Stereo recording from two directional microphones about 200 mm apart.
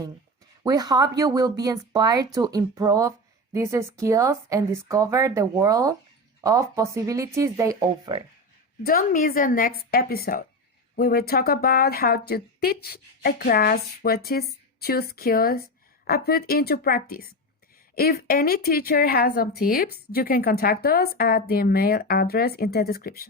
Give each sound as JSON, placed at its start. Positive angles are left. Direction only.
{"t": 0.6, "sound": "speech", "side_deg": -20}
{"t": 8.8, "sound": "a woman's voice", "side_deg": 45}